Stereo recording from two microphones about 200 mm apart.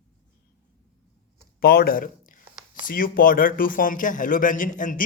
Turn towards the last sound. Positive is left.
turn(degrees=40)  # may be behind; listen again after turning